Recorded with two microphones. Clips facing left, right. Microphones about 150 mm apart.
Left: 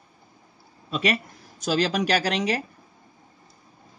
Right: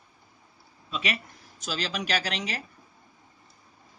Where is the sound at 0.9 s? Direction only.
45° left (ahead or behind).